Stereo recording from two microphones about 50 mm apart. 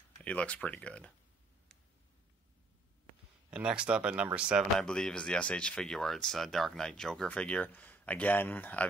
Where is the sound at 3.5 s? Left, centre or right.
Right.